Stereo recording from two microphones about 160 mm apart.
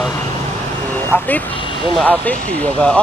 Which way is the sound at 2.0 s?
10° left (ahead or behind).